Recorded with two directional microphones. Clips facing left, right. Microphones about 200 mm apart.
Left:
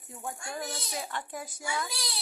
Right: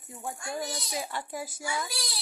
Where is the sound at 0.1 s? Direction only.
10° right (ahead or behind).